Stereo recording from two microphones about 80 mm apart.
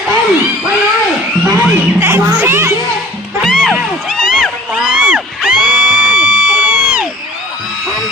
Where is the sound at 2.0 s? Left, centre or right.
Right.